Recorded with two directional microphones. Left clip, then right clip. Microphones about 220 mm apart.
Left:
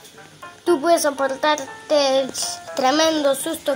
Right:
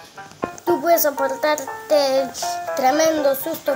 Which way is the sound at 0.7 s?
20° left (ahead or behind).